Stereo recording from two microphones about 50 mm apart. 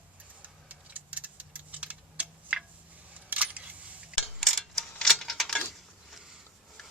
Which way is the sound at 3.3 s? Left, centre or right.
Right.